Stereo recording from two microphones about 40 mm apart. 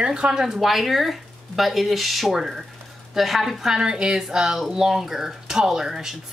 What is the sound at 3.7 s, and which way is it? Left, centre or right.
A woman's voice, centre.